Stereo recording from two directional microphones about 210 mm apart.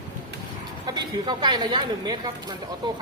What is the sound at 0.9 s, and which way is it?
Speech, 20° right (ahead or behind).